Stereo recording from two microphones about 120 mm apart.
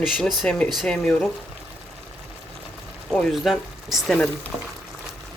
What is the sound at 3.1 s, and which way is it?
Speech, centre (ahead or behind).